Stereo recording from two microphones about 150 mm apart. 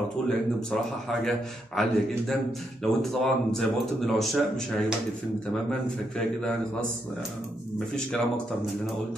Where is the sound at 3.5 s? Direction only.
Centre (ahead or behind).